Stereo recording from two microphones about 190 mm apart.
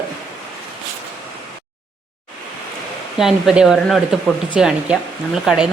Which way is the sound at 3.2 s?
Centre (ahead or behind).